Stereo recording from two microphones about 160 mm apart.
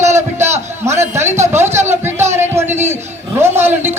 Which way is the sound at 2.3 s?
15° right (ahead or behind).